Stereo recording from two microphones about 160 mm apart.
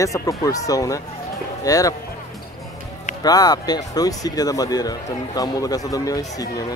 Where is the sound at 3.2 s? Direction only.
25° left (ahead or behind).